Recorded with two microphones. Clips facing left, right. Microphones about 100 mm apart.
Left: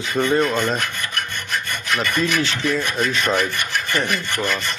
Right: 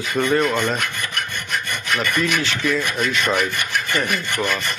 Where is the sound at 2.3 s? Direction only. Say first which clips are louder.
Left 1 dB; 30° left (ahead or behind).